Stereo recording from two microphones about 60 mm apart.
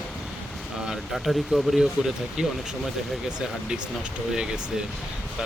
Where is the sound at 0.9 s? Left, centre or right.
Centre.